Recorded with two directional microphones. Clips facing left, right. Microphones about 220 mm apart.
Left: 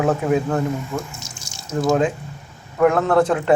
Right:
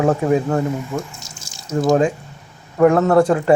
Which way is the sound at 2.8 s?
5° right (ahead or behind).